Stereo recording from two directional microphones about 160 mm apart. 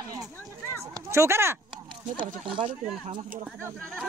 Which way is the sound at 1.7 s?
30° right (ahead or behind).